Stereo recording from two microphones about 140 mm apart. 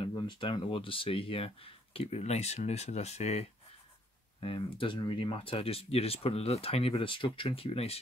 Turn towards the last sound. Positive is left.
turn(degrees=45)  # may be behind; listen again after turning